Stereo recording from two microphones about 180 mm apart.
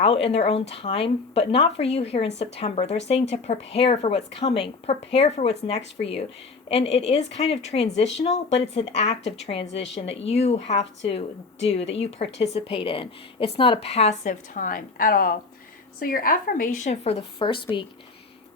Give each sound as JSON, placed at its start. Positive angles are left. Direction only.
{"t": 0.0, "sound": "a woman's voice", "side_deg": 30}